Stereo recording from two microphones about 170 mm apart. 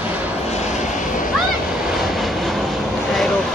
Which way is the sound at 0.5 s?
45° left (ahead or behind).